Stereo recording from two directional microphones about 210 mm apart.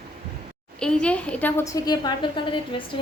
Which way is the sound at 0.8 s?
5° left (ahead or behind).